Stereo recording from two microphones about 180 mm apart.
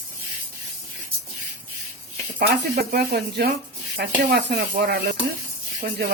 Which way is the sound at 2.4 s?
55° right (ahead or behind).